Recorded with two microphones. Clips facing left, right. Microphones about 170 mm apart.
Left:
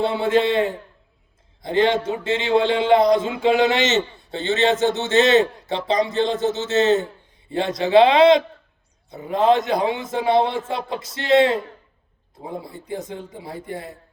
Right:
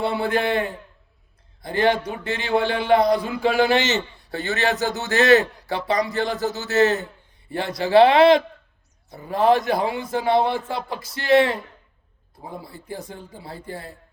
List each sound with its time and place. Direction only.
0.0 s a man's voice: 25° left (ahead or behind)